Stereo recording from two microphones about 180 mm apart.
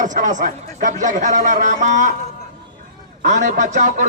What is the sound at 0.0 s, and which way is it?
A man's voice, 45° right (ahead or behind).